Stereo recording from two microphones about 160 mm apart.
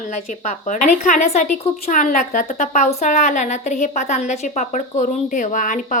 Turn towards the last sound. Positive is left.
turn(degrees=55)  # may be behind; listen again after turning